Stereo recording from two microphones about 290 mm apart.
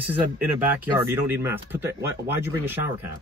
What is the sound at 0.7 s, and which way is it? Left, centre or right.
Speech, centre.